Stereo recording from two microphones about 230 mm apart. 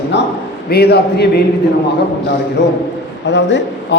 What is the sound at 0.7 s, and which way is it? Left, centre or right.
Speech, left.